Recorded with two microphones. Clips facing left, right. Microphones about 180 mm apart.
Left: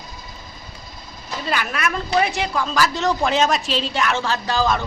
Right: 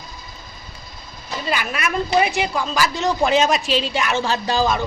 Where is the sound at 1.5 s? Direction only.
10° right (ahead or behind).